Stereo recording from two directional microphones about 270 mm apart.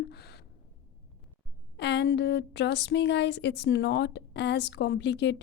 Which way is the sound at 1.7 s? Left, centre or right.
Left.